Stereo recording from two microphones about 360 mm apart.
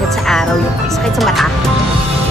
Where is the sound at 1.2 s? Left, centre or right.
Centre.